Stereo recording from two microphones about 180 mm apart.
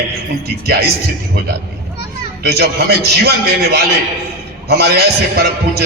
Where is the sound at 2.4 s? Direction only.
60° right (ahead or behind).